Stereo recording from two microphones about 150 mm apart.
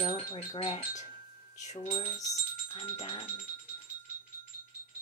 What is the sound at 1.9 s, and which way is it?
Speech, 35° left (ahead or behind).